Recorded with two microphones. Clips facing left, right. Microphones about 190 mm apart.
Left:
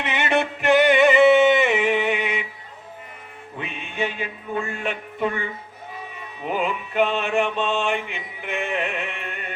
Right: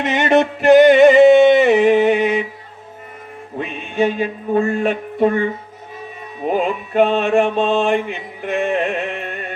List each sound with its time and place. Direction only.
0.0 s music: 40° right (ahead or behind)
3.6 s a sound: 40° right (ahead or behind)
6.4 s mantra: 40° right (ahead or behind)